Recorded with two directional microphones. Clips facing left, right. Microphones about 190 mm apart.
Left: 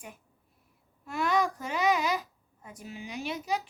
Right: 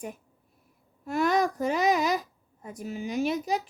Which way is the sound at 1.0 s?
40° right (ahead or behind).